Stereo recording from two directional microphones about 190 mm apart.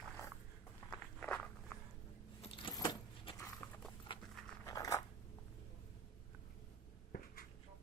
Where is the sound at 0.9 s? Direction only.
5° left (ahead or behind).